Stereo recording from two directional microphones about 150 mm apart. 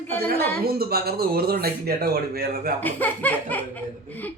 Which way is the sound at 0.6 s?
90° right.